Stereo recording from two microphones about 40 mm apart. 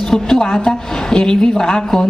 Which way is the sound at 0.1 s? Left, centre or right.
Centre.